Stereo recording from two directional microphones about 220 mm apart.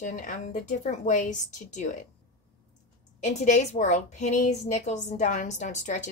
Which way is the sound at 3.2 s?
35° left (ahead or behind).